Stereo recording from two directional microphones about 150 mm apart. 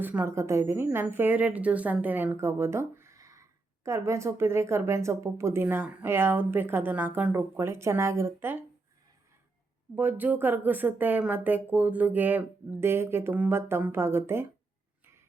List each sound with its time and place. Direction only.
0.0 s speech: 15° right (ahead or behind)
9.9 s speech: 10° right (ahead or behind)